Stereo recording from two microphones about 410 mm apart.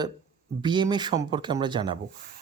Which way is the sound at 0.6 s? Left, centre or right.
Centre.